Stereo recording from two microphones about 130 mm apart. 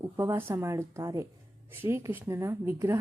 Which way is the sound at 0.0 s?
20° right (ahead or behind).